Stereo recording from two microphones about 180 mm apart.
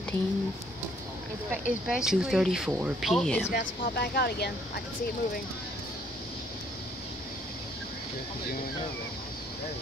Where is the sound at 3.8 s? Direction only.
60° left (ahead or behind).